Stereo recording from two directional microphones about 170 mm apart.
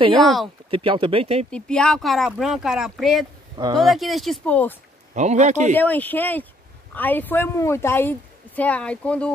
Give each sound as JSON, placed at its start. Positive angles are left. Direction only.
{"t": 0.2, "sound": "speech", "side_deg": 0}
{"t": 0.7, "sound": "speech", "side_deg": -30}
{"t": 1.5, "sound": "speech", "side_deg": 5}
{"t": 5.1, "sound": "a man's voice", "side_deg": -45}
{"t": 5.8, "sound": "a woman's voice", "side_deg": 10}